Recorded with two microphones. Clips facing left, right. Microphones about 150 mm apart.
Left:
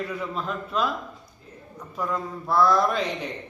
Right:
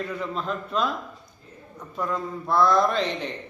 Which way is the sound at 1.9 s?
5° left (ahead or behind).